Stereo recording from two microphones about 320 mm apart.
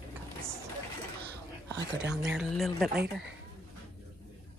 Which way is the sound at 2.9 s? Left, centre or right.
Right.